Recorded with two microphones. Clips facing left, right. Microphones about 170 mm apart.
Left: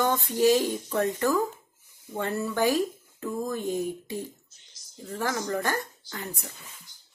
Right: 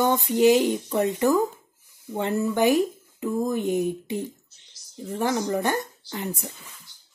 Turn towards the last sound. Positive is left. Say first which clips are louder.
# right 6 dB
turn(degrees=-20)  # may be behind; listen again after turning